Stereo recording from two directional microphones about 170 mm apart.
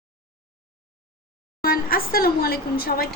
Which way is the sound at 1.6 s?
60° left (ahead or behind).